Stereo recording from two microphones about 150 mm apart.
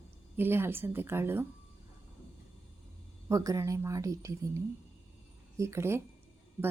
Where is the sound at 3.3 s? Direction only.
20° right (ahead or behind).